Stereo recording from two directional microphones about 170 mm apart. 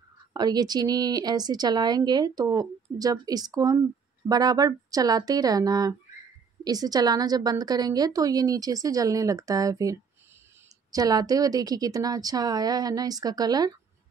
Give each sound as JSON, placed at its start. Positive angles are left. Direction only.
{"t": 0.3, "sound": "speech", "side_deg": -25}